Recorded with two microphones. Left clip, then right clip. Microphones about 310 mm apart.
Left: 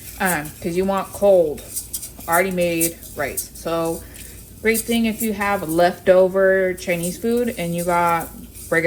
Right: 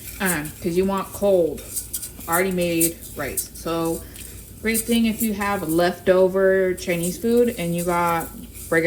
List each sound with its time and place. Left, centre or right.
0.3 s speech: centre
3.2 s a woman's voice: centre